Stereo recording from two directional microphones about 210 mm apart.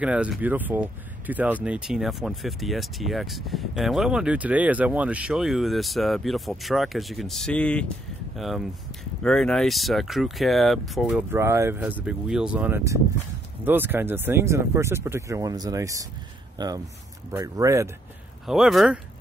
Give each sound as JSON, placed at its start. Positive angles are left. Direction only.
{"t": 0.0, "sound": "speech", "side_deg": -5}
{"t": 18.5, "sound": "speech", "side_deg": 0}